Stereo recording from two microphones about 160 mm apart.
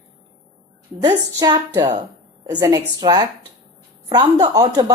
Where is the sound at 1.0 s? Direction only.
25° right (ahead or behind).